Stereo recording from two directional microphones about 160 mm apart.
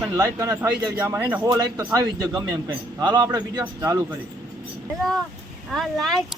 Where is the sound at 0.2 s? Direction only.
20° right (ahead or behind).